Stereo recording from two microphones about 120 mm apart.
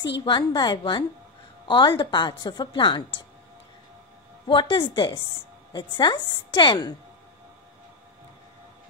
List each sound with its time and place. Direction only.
0.0 s a woman's voice: 40° left (ahead or behind)
4.5 s a woman's voice: 40° left (ahead or behind)